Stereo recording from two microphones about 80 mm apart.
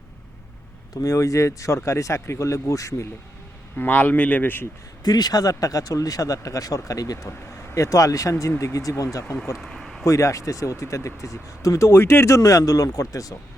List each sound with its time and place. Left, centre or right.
1.0 s speech: left
3.8 s speech: left
5.0 s speech: left
7.3 s speech: left
9.6 s a sound: centre
10.1 s speech: left